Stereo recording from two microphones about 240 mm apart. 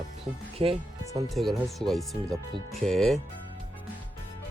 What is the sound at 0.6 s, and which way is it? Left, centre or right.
Speech, right.